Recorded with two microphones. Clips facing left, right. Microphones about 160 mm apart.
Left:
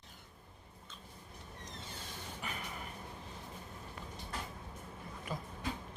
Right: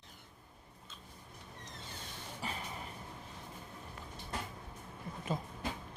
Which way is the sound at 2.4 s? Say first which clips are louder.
Right 3 dB; 30° right (ahead or behind).